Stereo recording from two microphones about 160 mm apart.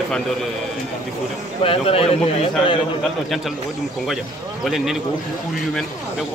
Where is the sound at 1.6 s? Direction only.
35° left (ahead or behind).